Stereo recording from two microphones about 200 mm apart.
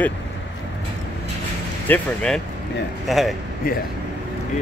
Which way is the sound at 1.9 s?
5° left (ahead or behind).